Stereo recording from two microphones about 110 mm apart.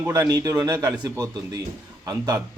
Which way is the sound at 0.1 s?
35° right (ahead or behind).